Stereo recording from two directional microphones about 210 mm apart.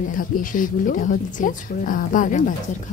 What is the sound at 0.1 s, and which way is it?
Speech, 40° left (ahead or behind).